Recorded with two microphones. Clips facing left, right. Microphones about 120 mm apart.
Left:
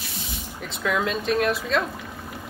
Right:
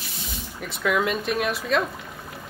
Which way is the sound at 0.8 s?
5° right (ahead or behind).